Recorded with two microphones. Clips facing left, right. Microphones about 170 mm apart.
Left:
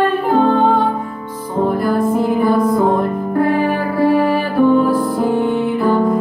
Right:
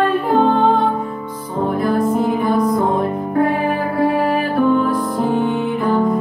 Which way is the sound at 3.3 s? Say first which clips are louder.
Left 2 dB; centre (ahead or behind).